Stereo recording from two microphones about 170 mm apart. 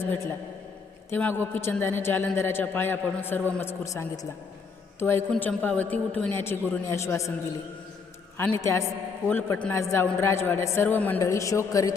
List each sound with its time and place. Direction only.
0.0 s a man's voice: 15° left (ahead or behind)
8.4 s a man's voice: 15° left (ahead or behind)